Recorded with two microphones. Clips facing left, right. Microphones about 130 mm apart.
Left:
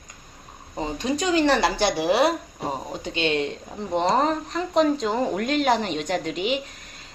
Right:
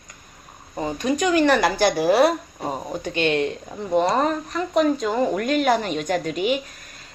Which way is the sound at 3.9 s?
25° left (ahead or behind).